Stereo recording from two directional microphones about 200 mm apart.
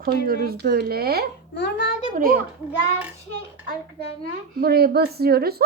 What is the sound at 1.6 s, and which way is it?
Speech, 60° left (ahead or behind).